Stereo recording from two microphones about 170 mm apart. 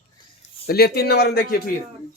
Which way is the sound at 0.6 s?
70° left (ahead or behind).